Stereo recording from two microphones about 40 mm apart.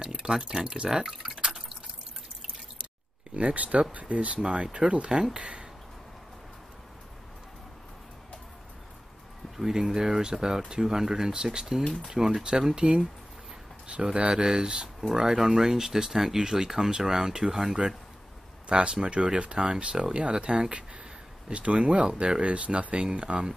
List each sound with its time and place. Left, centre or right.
0.0 s speech: centre
1.0 s speech: centre
1.4 s drip: centre
3.3 s speech: right
4.4 s speech: centre
4.7 s speech: right
9.8 s speech: centre
14.1 s speech: right